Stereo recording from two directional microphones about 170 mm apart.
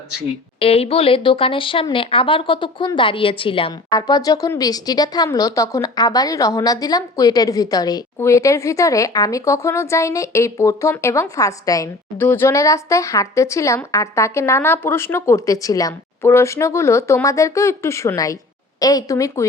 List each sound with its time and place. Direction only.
0.6 s speech: 35° left (ahead or behind); by 19.5 s 20° left (ahead or behind)